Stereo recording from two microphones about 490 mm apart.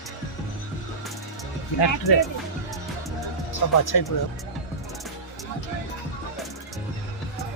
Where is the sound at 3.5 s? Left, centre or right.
Left.